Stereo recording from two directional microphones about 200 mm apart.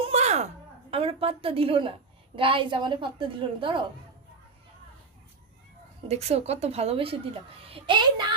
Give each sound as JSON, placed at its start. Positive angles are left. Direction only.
{"t": 0.0, "sound": "a sound", "side_deg": -35}
{"t": 2.3, "sound": "a woman's voice", "side_deg": -25}
{"t": 6.1, "sound": "a woman's voice", "side_deg": -30}